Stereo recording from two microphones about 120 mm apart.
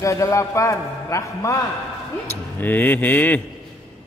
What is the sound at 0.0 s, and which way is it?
A man's voice, 25° left (ahead or behind).